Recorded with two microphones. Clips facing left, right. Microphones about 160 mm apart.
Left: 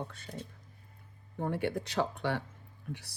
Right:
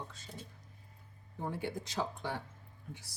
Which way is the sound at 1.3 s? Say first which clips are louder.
Left 6 dB; 60° left (ahead or behind).